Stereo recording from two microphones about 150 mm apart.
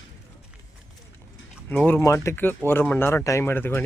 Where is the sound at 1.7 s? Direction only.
10° left (ahead or behind).